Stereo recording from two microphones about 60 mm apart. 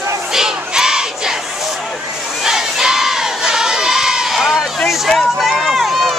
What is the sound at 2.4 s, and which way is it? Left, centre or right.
Crowd, centre.